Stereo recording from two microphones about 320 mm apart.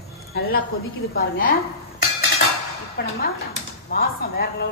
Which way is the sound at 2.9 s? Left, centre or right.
Left.